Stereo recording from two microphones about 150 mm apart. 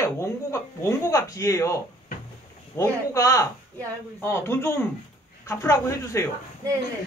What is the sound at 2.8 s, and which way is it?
Speech, 20° left (ahead or behind).